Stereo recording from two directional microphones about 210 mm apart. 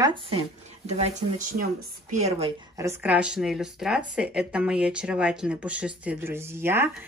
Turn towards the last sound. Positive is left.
turn(degrees=-10)  # may be behind; listen again after turning